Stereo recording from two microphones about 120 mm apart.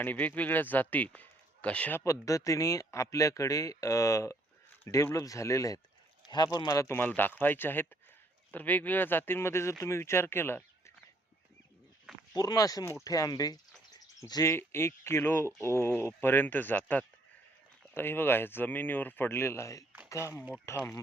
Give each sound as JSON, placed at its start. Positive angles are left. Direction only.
{"t": 0.0, "sound": "speech", "side_deg": 15}
{"t": 12.3, "sound": "speech", "side_deg": 30}